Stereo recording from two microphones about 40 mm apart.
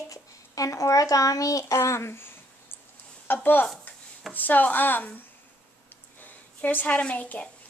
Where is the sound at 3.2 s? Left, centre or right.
Left.